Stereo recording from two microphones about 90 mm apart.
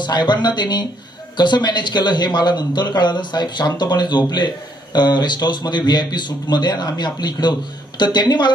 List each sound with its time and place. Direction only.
0.0 s speech: 55° left (ahead or behind)